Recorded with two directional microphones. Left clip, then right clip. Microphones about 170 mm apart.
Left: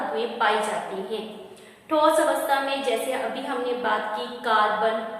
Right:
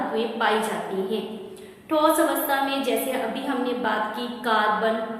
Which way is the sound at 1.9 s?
10° left (ahead or behind).